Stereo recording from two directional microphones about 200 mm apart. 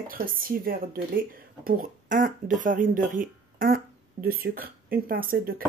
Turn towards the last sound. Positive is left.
turn(degrees=-45)  # may be behind; listen again after turning